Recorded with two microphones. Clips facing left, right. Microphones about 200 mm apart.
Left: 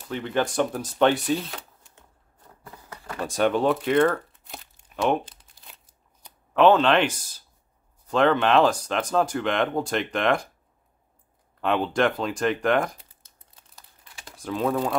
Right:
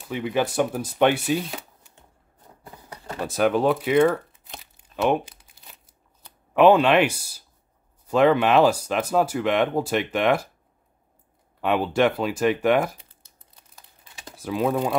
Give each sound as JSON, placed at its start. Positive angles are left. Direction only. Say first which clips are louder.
{"t": 0.0, "sound": "speech", "louder": "right 2 dB", "side_deg": -5}
{"t": 2.6, "sound": "a sound", "louder": "right 1 dB", "side_deg": -15}
{"t": 3.3, "sound": "speech", "louder": "right 1 dB", "side_deg": -5}
{"t": 4.7, "sound": "crumpling", "louder": "right 2 dB", "side_deg": -5}
{"t": 6.5, "sound": "speech", "louder": "right 2 dB", "side_deg": -10}
{"t": 11.6, "sound": "speech", "louder": "right 2 dB", "side_deg": -5}
{"t": 14.3, "sound": "speech", "louder": "right 2 dB", "side_deg": -5}